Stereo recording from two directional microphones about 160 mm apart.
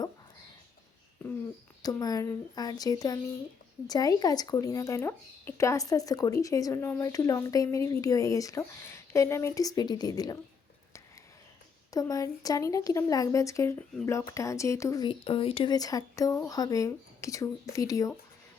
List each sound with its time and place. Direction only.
1.8 s speech: 25° left (ahead or behind)
11.9 s speech: 20° left (ahead or behind)
15.0 s speech: 35° left (ahead or behind)
15.7 s speech: 20° left (ahead or behind)